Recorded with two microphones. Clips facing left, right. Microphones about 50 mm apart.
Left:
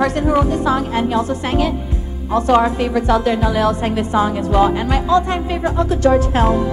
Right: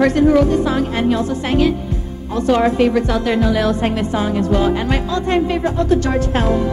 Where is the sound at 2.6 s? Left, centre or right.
Right.